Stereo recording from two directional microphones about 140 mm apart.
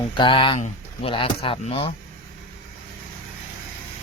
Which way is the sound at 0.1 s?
35° left (ahead or behind).